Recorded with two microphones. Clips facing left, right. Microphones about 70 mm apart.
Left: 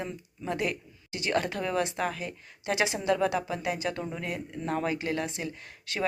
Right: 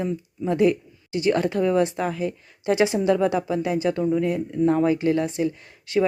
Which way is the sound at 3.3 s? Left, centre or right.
Right.